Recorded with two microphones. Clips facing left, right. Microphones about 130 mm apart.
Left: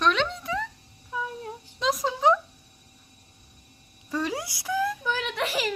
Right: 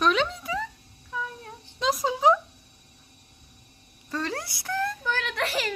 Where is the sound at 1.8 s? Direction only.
Centre (ahead or behind).